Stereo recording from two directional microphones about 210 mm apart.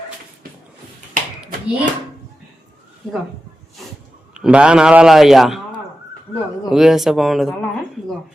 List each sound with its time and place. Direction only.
1.1 s clapping: 40° right (ahead or behind)
4.4 s a man's voice: 5° right (ahead or behind)
6.7 s a man's voice: centre (ahead or behind)